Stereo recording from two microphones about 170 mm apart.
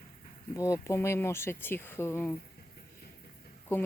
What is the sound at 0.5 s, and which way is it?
Speech, 20° left (ahead or behind).